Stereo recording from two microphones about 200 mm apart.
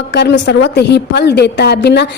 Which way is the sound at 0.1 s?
60° left (ahead or behind).